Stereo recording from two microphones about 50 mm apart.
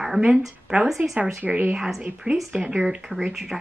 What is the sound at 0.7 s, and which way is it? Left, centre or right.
A woman's voice, right.